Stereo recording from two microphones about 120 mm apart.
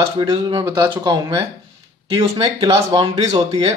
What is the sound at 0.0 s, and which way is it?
Speech, 35° right (ahead or behind).